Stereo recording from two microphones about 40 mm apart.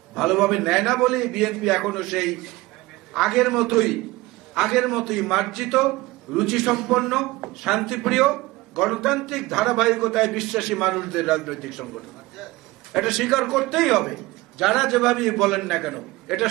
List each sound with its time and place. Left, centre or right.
0.1 s a man's voice: centre